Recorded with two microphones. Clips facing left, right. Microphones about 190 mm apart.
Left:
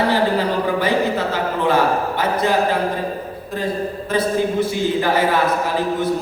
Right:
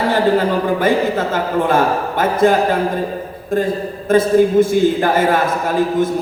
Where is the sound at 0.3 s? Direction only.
50° right (ahead or behind).